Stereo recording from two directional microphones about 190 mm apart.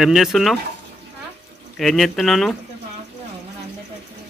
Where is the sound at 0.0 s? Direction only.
Centre (ahead or behind).